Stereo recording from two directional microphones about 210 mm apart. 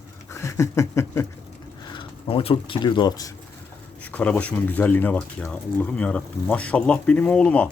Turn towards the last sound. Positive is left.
turn(degrees=5)  # may be behind; listen again after turning